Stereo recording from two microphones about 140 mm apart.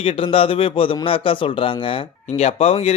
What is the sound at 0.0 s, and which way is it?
A man's voice, 40° left (ahead or behind).